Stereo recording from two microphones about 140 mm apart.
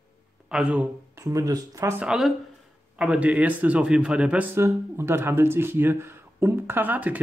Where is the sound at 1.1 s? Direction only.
25° right (ahead or behind).